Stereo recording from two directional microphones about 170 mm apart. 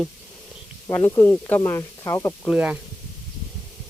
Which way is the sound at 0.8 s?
15° left (ahead or behind).